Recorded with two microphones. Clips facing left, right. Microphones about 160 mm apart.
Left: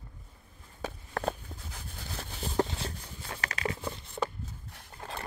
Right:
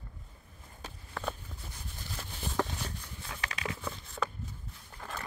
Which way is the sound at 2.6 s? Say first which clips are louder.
Left 4 dB; 30° left (ahead or behind).